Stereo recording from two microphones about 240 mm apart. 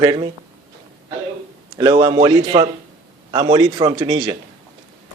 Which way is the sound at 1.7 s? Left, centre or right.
Centre.